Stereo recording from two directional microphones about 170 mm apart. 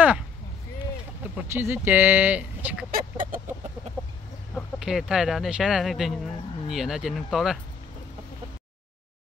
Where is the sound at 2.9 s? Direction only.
55° right (ahead or behind).